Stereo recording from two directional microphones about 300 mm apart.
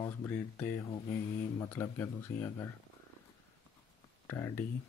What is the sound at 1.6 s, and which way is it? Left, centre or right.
Speech, centre.